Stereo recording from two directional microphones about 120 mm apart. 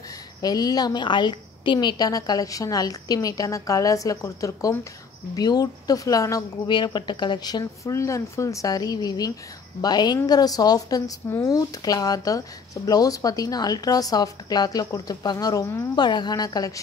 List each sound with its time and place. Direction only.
0.4 s speech: 35° left (ahead or behind)
16.0 s speech: 35° left (ahead or behind)